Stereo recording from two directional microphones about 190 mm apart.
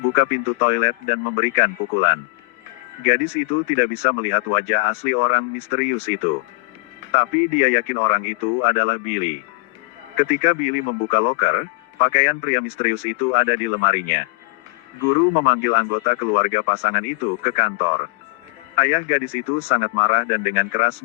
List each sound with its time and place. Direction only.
0.2 s speech: 35° left (ahead or behind)
15.4 s speech: 35° left (ahead or behind)